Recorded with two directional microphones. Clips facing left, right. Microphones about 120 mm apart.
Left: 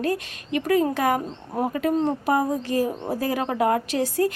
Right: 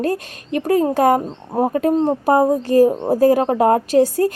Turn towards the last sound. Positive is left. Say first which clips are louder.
# right 8 dB
turn(degrees=-40)  # may be behind; listen again after turning